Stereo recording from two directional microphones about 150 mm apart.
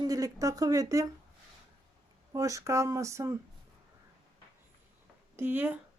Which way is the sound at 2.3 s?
20° right (ahead or behind).